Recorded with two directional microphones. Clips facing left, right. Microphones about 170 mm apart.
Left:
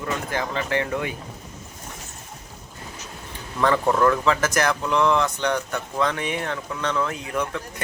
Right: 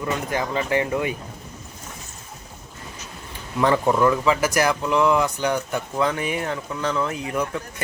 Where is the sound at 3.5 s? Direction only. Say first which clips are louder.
Right 1 dB; 10° right (ahead or behind).